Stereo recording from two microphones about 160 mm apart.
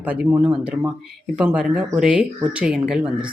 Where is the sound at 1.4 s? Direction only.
5° right (ahead or behind).